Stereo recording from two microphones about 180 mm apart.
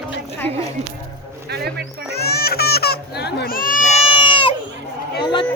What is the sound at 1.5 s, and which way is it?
Speech, 60° right (ahead or behind).